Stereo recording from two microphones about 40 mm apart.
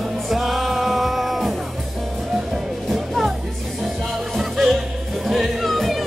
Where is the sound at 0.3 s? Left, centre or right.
Centre.